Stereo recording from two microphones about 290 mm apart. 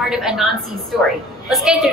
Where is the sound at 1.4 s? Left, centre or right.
Centre.